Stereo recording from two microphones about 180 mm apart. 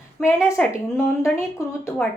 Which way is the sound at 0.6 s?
5° left (ahead or behind).